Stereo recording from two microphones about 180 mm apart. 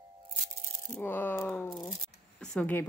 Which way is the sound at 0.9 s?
10° left (ahead or behind).